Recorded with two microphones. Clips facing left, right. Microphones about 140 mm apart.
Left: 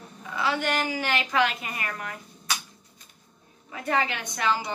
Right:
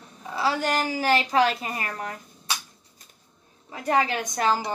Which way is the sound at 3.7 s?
35° right (ahead or behind).